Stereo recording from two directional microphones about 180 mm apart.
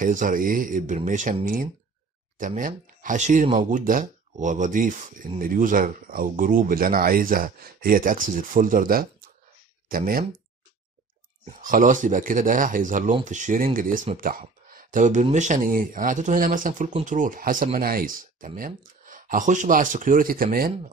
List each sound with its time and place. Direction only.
0.0 s speech: 50° right (ahead or behind)
11.6 s speech: 50° right (ahead or behind)